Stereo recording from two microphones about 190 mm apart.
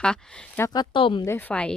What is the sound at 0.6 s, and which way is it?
Speech, 20° left (ahead or behind).